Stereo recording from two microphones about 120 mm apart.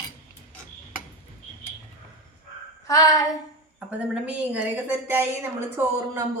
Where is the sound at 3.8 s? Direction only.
10° right (ahead or behind).